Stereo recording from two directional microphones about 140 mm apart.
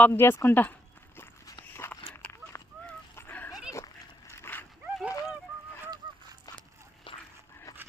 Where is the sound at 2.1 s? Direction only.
15° left (ahead or behind).